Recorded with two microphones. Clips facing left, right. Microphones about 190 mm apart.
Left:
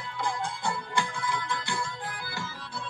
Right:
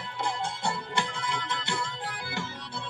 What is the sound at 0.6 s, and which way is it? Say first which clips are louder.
Music: left 1 dB; 25° right (ahead or behind).